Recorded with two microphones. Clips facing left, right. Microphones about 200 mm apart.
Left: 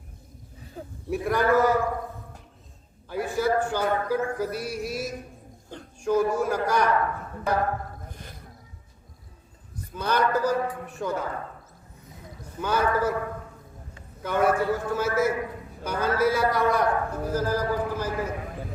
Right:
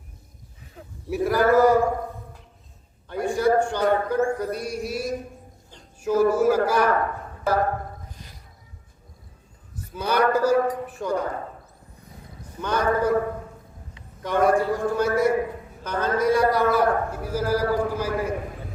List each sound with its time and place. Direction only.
0.8 s a sound: 35° left (ahead or behind)
1.1 s a man's voice: centre (ahead or behind)
3.1 s a man's voice: 5° left (ahead or behind)
8.1 s a sound: 55° left (ahead or behind)
9.9 s a man's voice: 10° right (ahead or behind)
12.6 s a man's voice: 5° left (ahead or behind)
14.2 s a man's voice: 5° left (ahead or behind)